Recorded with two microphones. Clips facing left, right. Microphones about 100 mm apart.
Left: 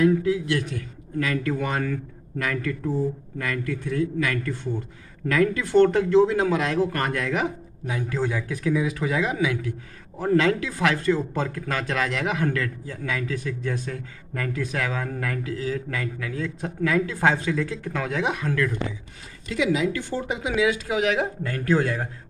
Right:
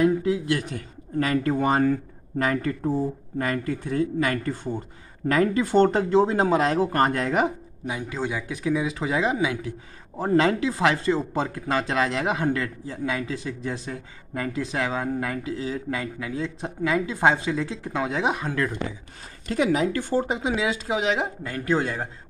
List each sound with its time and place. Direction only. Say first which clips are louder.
0.0 s speech: left 1 dB; 25° right (ahead or behind)
7.8 s speech: left 2 dB; 15° right (ahead or behind)
19.4 s speech: right 1 dB; 45° right (ahead or behind); by 22.1 s 20° right (ahead or behind)